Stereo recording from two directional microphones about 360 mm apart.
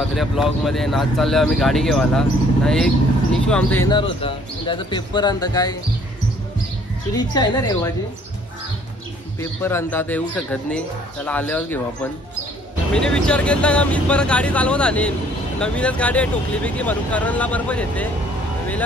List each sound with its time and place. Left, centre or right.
0.1 s speech: centre
7.1 s speech: centre
9.4 s speech: centre